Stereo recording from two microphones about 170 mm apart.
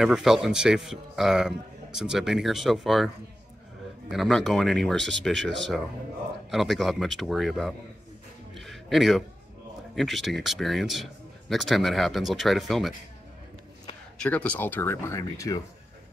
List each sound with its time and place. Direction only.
0.0 s a man's voice: 5° right (ahead or behind)
4.1 s a man's voice: centre (ahead or behind)
5.4 s speech: 90° right
6.5 s a man's voice: centre (ahead or behind)
8.5 s a sound: centre (ahead or behind)
9.9 s a man's voice: centre (ahead or behind)
14.1 s speech: 5° left (ahead or behind)